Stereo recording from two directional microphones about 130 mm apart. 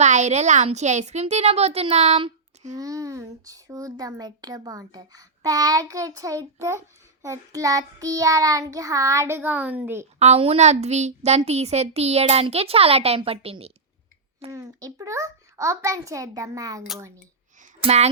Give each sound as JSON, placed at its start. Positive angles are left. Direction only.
{"t": 0.0, "sound": "speech", "side_deg": -65}
{"t": 2.7, "sound": "a child's voice", "side_deg": -25}
{"t": 10.2, "sound": "a woman's voice", "side_deg": -55}
{"t": 14.5, "sound": "a child's voice", "side_deg": -25}
{"t": 17.8, "sound": "speech", "side_deg": -55}